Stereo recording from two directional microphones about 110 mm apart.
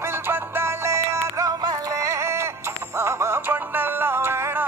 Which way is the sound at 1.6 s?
40° right (ahead or behind).